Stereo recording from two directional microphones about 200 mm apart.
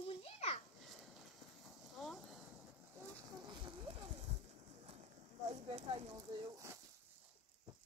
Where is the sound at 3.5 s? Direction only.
25° right (ahead or behind).